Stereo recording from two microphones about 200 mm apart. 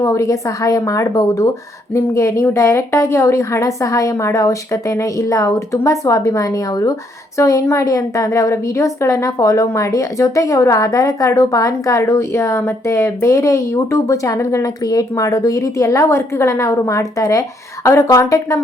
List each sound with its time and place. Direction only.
0.0 s a woman's voice: 15° left (ahead or behind)